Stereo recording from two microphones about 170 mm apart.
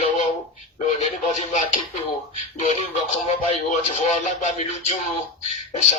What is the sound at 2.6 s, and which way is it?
Speech, 45° left (ahead or behind).